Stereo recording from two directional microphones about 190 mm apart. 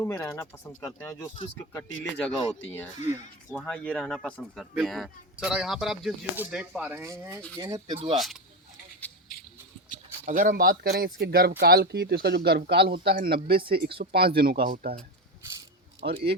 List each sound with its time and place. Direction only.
0.0 s speech: 15° left (ahead or behind)
3.5 s speech: 5° left (ahead or behind); by 7.9 s 20° right (ahead or behind)
8.1 s speech: centre (ahead or behind)
10.2 s a man's voice: 45° right (ahead or behind)
16.0 s speech: 60° right (ahead or behind)